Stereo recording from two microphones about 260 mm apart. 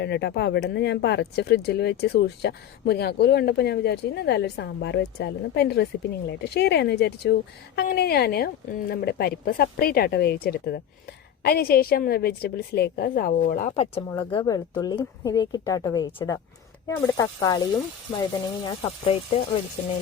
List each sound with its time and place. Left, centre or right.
0.0 s speech: left
14.1 s speech: centre
18.6 s speech: centre